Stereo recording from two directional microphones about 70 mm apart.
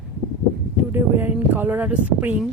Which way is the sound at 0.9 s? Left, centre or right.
Right.